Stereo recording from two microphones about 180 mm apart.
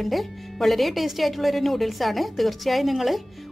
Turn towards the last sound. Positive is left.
turn(degrees=0)  # may be behind; listen again after turning